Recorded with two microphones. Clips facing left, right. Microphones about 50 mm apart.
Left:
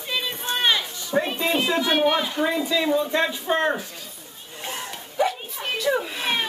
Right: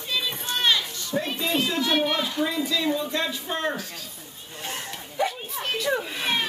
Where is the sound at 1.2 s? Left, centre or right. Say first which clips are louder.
Left 3 dB; left.